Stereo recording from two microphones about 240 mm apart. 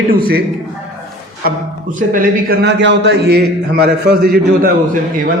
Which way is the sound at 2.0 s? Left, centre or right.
Right.